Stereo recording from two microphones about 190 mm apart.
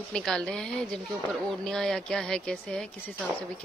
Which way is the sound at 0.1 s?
5° left (ahead or behind).